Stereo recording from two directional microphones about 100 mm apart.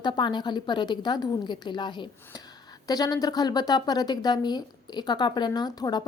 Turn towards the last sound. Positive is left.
turn(degrees=40)  # may be behind; listen again after turning